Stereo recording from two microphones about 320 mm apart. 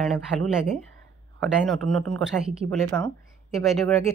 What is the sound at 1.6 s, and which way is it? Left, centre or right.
Speech, centre.